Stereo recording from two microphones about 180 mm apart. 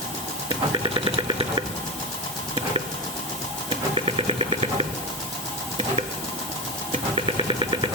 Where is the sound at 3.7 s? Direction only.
35° right (ahead or behind).